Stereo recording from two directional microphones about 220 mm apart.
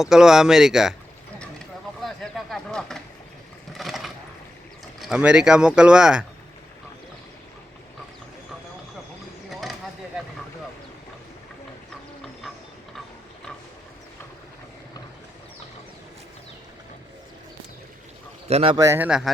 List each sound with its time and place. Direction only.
0.0 s speech: centre (ahead or behind)
1.4 s a sound: centre (ahead or behind)
3.7 s vehicle: centre (ahead or behind)
4.9 s speech: 5° right (ahead or behind)
9.5 s a sound: centre (ahead or behind)
18.4 s speech: 25° right (ahead or behind)
18.8 s speech: 10° right (ahead or behind)